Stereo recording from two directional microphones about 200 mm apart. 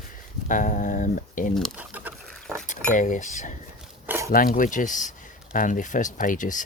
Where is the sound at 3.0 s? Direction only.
40° left (ahead or behind).